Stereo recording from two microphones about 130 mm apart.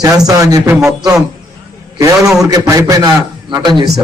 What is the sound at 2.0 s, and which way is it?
A man's voice, 25° right (ahead or behind).